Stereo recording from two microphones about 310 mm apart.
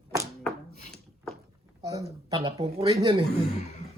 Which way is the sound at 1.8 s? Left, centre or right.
Centre.